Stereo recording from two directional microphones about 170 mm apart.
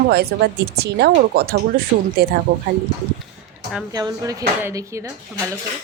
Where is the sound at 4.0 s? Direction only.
20° right (ahead or behind).